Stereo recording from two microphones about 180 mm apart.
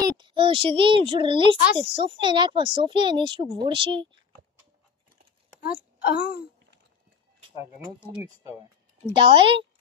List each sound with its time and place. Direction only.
0.2 s speech: 30° right (ahead or behind)
6.0 s speech: 60° left (ahead or behind)
9.0 s speech: 30° right (ahead or behind)